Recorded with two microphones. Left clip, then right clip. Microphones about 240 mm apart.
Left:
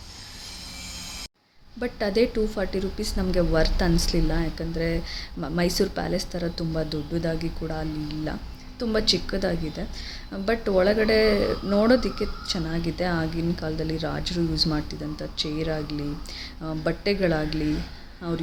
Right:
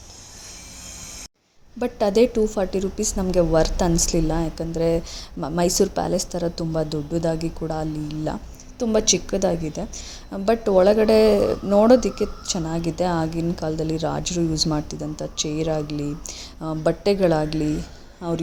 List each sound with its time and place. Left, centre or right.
1.8 s a woman's voice: centre